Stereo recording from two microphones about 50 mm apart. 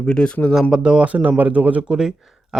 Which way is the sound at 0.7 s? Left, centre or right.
Centre.